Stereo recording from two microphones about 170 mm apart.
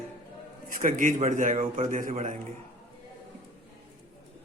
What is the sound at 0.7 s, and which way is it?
A man's voice, 50° right (ahead or behind).